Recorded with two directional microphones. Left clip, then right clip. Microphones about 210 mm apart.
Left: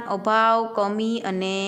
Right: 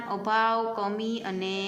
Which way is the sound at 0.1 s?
45° left (ahead or behind).